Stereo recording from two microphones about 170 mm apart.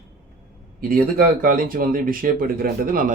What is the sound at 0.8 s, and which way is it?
Speech, 60° right (ahead or behind).